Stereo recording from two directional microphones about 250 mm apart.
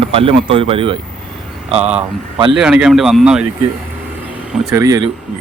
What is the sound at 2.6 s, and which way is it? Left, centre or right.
Speech, centre.